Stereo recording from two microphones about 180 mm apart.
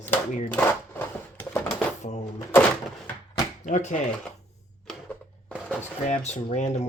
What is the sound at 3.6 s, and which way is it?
Speech, 45° left (ahead or behind).